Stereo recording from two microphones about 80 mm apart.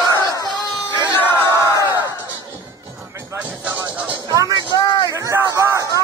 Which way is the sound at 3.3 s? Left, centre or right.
Centre.